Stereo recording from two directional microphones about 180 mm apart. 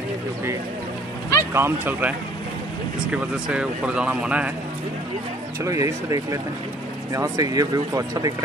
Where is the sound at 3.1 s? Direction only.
5° right (ahead or behind).